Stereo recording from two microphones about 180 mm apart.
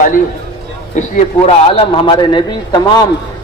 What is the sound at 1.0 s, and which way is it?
A man's voice, 35° left (ahead or behind).